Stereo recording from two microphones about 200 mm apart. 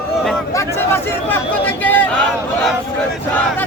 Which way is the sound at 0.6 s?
10° left (ahead or behind).